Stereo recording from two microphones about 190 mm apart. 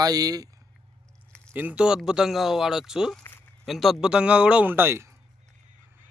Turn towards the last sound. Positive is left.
turn(degrees=-15)  # may be behind; listen again after turning